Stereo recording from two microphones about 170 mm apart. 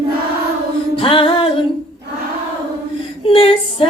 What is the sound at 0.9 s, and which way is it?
Music, 30° left (ahead or behind).